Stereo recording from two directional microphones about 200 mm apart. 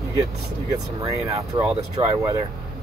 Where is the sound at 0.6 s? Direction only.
15° right (ahead or behind).